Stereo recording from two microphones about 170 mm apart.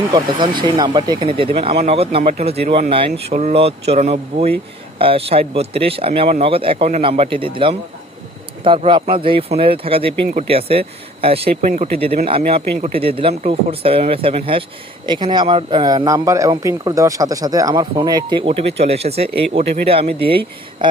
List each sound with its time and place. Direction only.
0.1 s speech: 30° right (ahead or behind)